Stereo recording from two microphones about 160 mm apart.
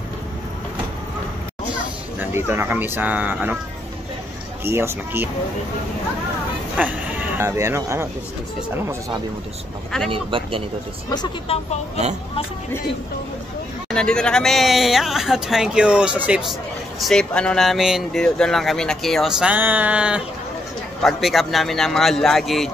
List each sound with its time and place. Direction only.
2.1 s speech: 15° right (ahead or behind)
4.6 s speech: 15° right (ahead or behind)
6.8 s speech: 10° right (ahead or behind)
10.1 s speech: 35° right (ahead or behind)
11.4 s speech: 35° left (ahead or behind)
13.8 s speech: 5° left (ahead or behind)
17.0 s speech: 5° left (ahead or behind)